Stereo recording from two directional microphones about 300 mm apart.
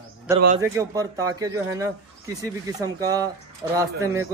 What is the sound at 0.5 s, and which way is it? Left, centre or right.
Speech, centre.